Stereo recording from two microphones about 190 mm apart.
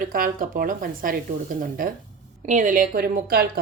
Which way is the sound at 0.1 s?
50° right (ahead or behind).